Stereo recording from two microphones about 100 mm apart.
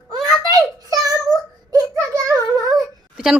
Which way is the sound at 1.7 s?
35° right (ahead or behind).